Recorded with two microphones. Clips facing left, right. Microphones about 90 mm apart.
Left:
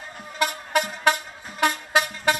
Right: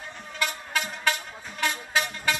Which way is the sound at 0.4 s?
55° left (ahead or behind).